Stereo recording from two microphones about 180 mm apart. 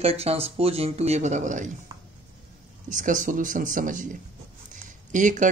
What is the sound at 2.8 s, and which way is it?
Speech, 45° right (ahead or behind).